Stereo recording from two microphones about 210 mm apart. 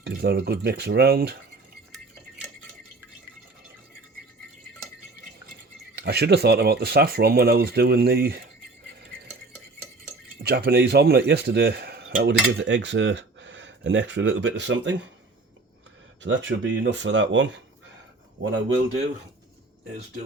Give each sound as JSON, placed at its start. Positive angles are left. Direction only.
{"t": 0.0, "sound": "speech", "side_deg": -50}
{"t": 6.0, "sound": "speech", "side_deg": -50}
{"t": 10.4, "sound": "speech", "side_deg": -50}
{"t": 16.2, "sound": "speech", "side_deg": -65}